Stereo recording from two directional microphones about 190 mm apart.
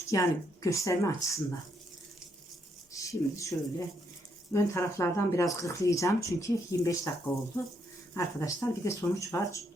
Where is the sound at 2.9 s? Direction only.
15° left (ahead or behind).